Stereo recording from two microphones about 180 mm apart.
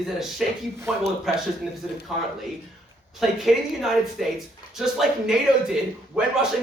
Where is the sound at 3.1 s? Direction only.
Centre (ahead or behind).